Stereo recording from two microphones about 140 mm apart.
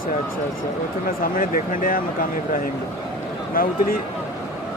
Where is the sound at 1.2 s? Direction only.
80° left.